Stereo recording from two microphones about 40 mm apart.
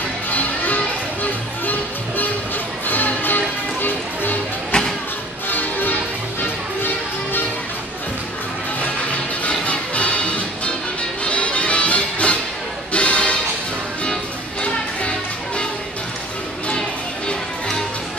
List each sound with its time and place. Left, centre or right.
0.3 s music: left
4.7 s a sound: left
5.5 s music: left
9.5 s music: left
14.6 s music: left